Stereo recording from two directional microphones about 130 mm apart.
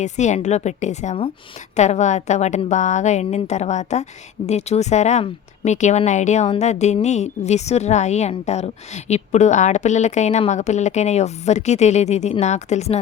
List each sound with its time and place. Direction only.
0.0 s a woman's voice: 65° left (ahead or behind)